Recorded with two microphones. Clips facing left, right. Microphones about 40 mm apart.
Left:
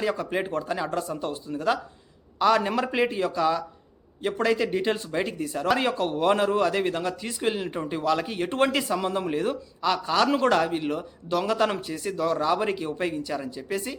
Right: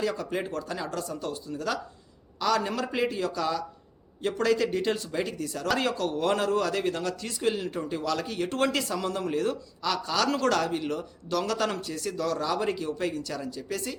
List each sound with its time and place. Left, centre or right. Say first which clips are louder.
0.0 s speech: left 3 dB; left